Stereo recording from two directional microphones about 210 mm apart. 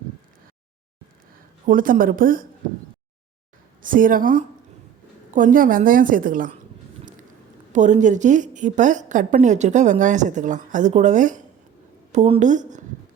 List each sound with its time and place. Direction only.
1.6 s a woman's voice: 40° right (ahead or behind)
3.8 s a woman's voice: 40° right (ahead or behind)
7.7 s a woman's voice: 35° right (ahead or behind)